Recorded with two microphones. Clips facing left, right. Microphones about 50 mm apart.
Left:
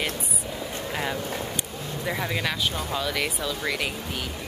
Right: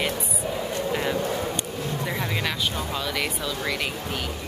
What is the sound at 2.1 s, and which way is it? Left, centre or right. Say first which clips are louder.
Speech: left 3 dB; centre.